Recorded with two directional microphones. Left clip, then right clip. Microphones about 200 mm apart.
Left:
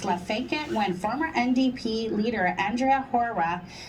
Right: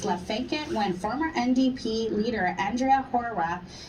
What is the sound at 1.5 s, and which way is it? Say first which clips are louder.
Speech: even; 40° left (ahead or behind).